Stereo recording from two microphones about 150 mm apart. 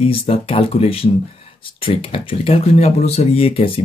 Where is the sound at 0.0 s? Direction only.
40° left (ahead or behind).